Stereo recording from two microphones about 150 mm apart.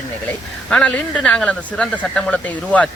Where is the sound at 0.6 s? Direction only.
5° left (ahead or behind).